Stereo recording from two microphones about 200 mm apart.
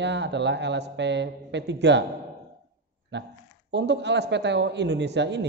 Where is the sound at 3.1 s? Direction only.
60° right (ahead or behind).